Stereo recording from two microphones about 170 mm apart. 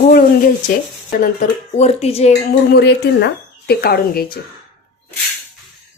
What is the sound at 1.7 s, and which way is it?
Speech, 40° left (ahead or behind).